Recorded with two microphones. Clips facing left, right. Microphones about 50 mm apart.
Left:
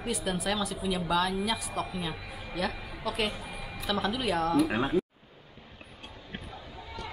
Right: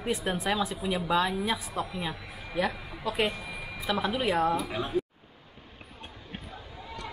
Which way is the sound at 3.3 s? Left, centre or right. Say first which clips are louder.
Right 2 dB; right.